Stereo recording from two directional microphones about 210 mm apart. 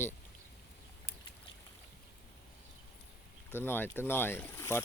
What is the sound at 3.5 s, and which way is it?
Speech, 10° left (ahead or behind).